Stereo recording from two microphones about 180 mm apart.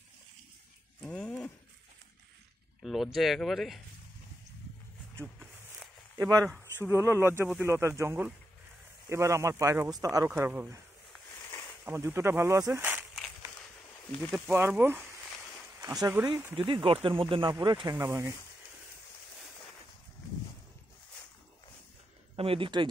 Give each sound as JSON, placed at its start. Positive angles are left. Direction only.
{"t": 1.0, "sound": "a sound", "side_deg": 5}
{"t": 2.8, "sound": "speech", "side_deg": 0}
{"t": 5.2, "sound": "a sound", "side_deg": 5}
{"t": 6.1, "sound": "speech", "side_deg": -20}
{"t": 11.8, "sound": "speech", "side_deg": -15}
{"t": 14.5, "sound": "speech", "side_deg": -10}
{"t": 16.5, "sound": "speech", "side_deg": -30}
{"t": 22.3, "sound": "speech", "side_deg": -30}